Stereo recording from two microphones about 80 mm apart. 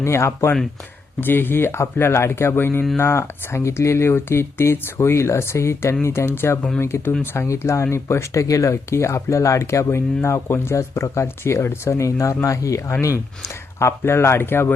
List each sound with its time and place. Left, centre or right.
0.0 s speech: left